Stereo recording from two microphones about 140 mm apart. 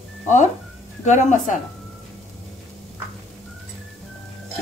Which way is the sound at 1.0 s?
60° left (ahead or behind).